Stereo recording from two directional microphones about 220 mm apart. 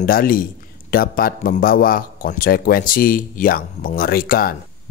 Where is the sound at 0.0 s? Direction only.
40° left (ahead or behind).